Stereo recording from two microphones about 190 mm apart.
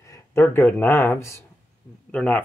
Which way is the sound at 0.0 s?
15° left (ahead or behind).